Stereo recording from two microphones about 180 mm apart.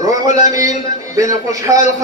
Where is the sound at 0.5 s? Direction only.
20° right (ahead or behind).